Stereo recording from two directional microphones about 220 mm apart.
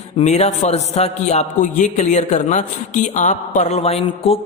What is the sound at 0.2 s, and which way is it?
A man's voice, 30° left (ahead or behind).